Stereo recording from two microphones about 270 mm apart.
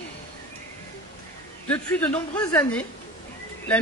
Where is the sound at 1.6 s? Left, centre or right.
Centre.